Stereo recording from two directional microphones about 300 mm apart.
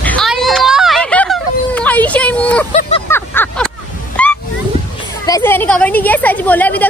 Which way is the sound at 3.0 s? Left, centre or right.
Centre.